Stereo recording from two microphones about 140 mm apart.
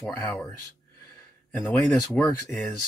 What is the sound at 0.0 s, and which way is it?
Speech, 10° left (ahead or behind).